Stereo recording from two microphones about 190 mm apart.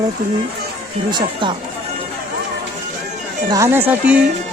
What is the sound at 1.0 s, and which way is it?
Speech, 25° right (ahead or behind).